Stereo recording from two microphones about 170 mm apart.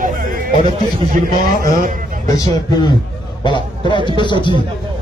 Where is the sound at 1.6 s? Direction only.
55° right (ahead or behind).